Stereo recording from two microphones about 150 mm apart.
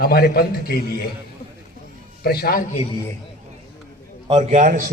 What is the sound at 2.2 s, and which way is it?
Speech, 90° left.